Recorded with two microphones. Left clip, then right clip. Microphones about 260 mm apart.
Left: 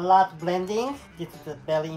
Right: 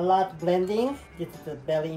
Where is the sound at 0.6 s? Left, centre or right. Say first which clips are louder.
Right 1 dB; left.